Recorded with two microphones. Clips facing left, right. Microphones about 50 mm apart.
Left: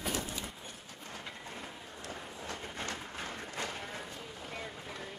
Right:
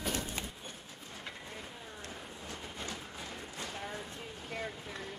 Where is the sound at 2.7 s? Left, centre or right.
Left.